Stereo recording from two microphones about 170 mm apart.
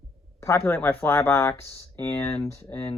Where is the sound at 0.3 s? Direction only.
15° left (ahead or behind).